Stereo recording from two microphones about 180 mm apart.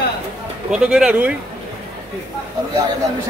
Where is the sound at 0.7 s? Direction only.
5° right (ahead or behind).